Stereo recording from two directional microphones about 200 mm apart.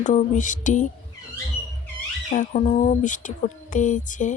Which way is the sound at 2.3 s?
35° left (ahead or behind).